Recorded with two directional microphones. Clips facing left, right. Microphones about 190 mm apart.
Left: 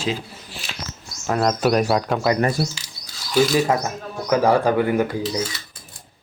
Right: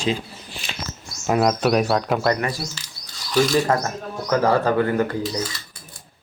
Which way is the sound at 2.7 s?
10° left (ahead or behind).